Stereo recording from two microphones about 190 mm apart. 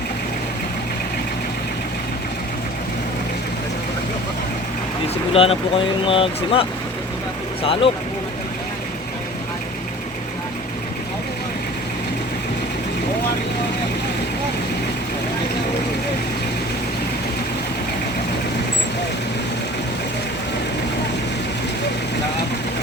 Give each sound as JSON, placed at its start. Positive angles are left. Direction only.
{"t": 5.3, "sound": "speech", "side_deg": 30}